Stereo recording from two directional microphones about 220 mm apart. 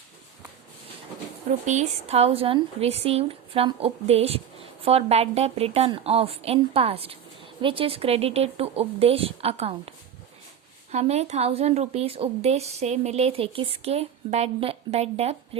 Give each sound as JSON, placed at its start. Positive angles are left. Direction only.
{"t": 1.6, "sound": "a woman's voice", "side_deg": -30}
{"t": 10.9, "sound": "a woman's voice", "side_deg": -30}